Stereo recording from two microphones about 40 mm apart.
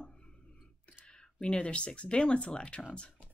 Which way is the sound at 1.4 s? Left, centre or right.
Left.